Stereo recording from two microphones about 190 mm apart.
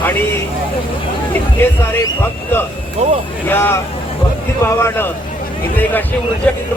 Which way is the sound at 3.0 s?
40° right (ahead or behind).